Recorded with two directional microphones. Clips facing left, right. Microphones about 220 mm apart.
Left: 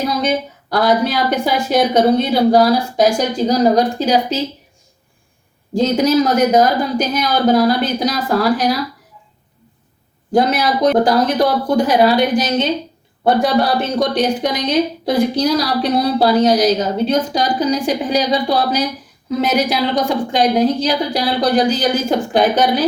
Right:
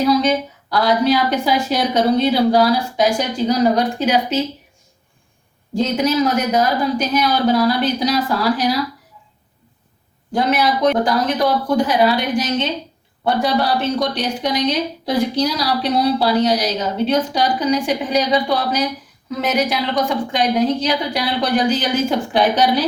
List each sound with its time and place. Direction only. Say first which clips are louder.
0.0 s a woman's voice: right 2 dB; 50° left (ahead or behind)
5.7 s a woman's voice: left 4 dB; 35° left (ahead or behind)
10.3 s a woman's voice: left 3 dB; 40° left (ahead or behind)